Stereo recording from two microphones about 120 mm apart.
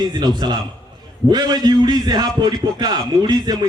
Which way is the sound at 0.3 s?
40° right (ahead or behind).